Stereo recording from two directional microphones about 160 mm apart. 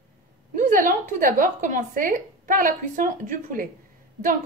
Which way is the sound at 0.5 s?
55° right (ahead or behind).